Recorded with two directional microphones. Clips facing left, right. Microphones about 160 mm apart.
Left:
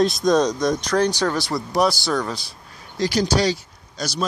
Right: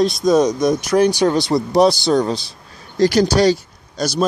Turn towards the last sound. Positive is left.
turn(degrees=-55)  # may be behind; listen again after turning